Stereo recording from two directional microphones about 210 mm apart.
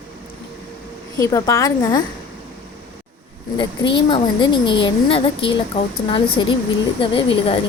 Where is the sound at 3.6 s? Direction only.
20° left (ahead or behind).